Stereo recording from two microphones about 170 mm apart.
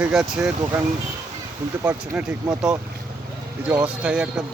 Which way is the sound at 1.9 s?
5° right (ahead or behind).